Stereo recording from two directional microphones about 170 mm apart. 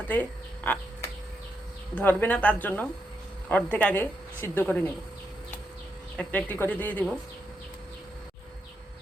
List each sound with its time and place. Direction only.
0.1 s speech: 10° left (ahead or behind)
2.0 s a woman's voice: 10° left (ahead or behind)
6.1 s a woman's voice: 10° left (ahead or behind)